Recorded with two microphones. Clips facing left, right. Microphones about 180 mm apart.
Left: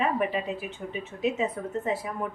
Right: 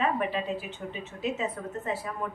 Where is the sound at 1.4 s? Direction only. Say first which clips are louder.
Left 4 dB; 15° left (ahead or behind).